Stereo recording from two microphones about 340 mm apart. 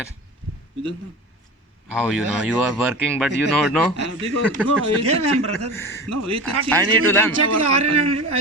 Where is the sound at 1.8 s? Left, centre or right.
Centre.